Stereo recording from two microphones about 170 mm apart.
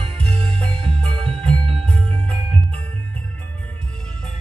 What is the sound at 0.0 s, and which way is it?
Music, 35° right (ahead or behind).